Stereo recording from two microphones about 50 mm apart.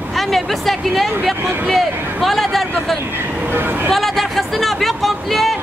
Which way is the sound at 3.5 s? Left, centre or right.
Right.